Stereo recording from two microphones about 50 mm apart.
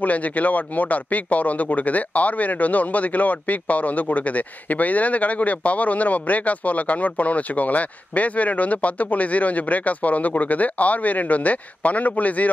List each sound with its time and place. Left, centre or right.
0.0 s speech: left